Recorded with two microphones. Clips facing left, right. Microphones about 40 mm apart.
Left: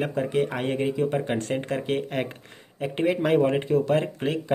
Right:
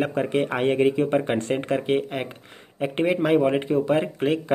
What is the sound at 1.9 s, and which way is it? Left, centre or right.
Speech, centre.